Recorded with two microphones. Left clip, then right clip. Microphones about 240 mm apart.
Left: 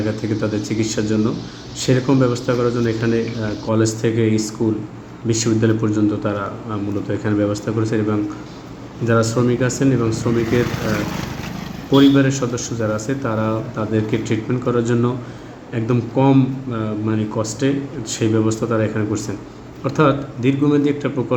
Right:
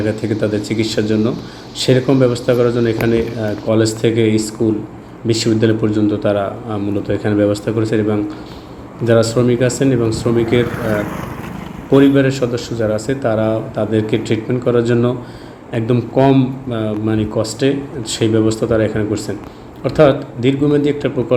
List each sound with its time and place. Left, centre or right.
0.2 s a man's voice: centre
10.9 s speech: left
11.9 s a man's voice: centre